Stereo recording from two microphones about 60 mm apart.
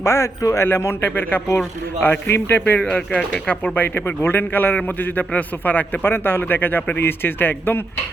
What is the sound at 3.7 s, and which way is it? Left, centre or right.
Speech, left.